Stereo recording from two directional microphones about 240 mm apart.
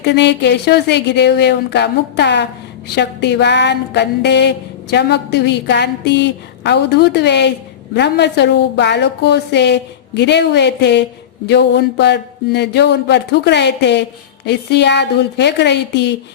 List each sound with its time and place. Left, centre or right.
0.0 s a woman's voice: left